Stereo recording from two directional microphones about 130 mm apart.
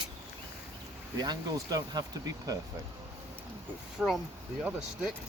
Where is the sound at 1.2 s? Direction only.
30° right (ahead or behind).